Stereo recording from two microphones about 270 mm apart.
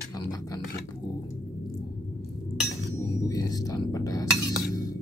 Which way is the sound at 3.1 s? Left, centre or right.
Centre.